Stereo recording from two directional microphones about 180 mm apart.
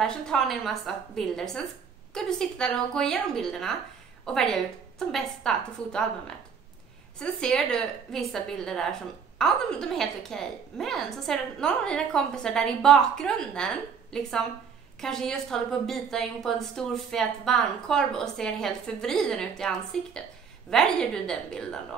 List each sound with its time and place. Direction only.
0.0 s a woman's voice: 5° left (ahead or behind)
7.2 s a woman's voice: 5° left (ahead or behind)